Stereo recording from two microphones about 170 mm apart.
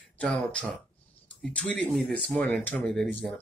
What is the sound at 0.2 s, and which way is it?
Speech, 5° left (ahead or behind).